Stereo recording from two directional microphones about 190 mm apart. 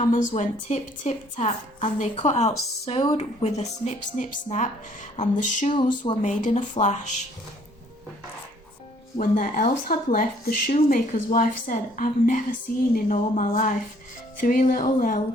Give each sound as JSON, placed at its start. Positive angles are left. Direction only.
{"t": 0.0, "sound": "a woman's voice", "side_deg": 40}
{"t": 9.1, "sound": "speech", "side_deg": 45}